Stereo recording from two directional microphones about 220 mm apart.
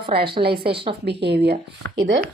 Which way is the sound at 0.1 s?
45° right (ahead or behind).